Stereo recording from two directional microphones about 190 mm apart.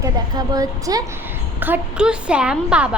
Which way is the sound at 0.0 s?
20° right (ahead or behind).